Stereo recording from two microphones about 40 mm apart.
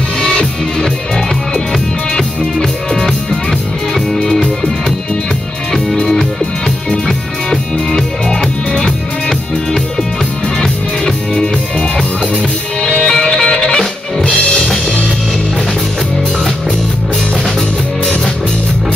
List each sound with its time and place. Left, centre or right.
2.1 s music: centre
5.9 s music: centre
7.9 s music: centre
10.6 s music: centre
12.8 s music: centre